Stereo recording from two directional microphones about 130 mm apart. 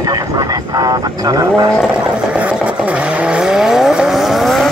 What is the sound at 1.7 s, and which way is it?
Vehicle, 5° right (ahead or behind).